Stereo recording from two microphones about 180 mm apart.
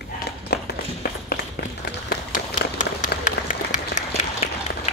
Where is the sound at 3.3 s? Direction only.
45° left (ahead or behind).